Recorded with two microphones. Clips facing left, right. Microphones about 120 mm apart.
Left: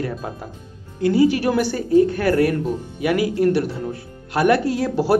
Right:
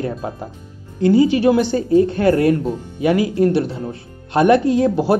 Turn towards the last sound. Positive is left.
turn(degrees=-20)  # may be behind; listen again after turning